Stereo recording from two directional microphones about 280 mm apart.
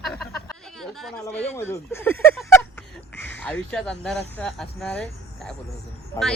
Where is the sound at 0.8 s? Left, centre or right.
Centre.